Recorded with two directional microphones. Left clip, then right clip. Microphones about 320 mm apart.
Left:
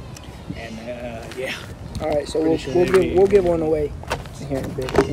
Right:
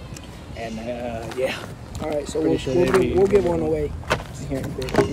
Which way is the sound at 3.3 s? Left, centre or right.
Centre.